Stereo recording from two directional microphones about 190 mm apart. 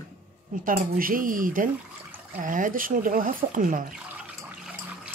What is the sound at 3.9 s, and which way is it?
Water, 5° right (ahead or behind).